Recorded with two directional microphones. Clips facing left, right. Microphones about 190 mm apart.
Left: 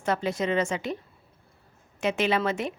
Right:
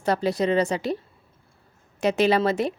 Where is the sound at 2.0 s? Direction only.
40° right (ahead or behind).